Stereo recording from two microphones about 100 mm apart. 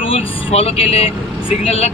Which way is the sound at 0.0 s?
70° left (ahead or behind).